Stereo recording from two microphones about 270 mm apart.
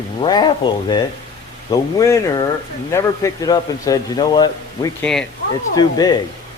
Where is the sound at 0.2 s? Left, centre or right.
Centre.